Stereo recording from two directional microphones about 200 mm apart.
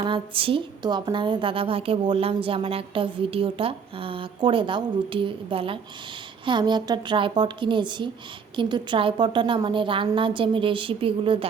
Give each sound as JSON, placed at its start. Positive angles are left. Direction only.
{"t": 0.0, "sound": "a woman's voice", "side_deg": -25}